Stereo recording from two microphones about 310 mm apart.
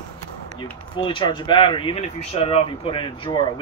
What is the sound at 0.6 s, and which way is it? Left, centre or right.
Speech, centre.